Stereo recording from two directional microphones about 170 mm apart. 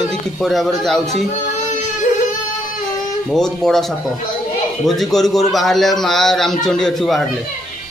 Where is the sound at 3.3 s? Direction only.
5° left (ahead or behind).